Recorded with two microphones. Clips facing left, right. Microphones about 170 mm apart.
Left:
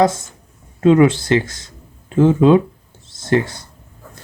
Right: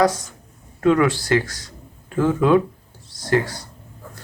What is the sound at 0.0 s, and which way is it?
Speech, 25° left (ahead or behind).